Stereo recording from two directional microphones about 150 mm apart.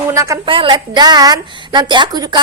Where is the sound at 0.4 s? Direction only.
35° right (ahead or behind).